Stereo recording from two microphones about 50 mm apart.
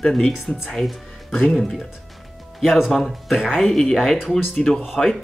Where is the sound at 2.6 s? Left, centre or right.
Centre.